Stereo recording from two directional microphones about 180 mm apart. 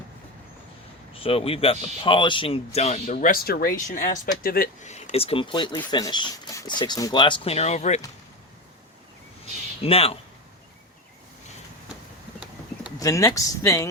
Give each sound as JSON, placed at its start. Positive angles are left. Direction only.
{"t": 1.1, "sound": "speech", "side_deg": 30}
{"t": 4.9, "sound": "speech", "side_deg": 40}
{"t": 9.8, "sound": "speech", "side_deg": 35}
{"t": 13.0, "sound": "speech", "side_deg": 15}